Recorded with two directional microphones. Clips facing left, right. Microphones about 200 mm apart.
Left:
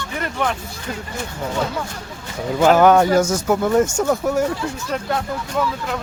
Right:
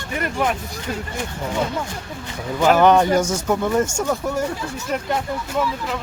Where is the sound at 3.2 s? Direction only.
10° right (ahead or behind).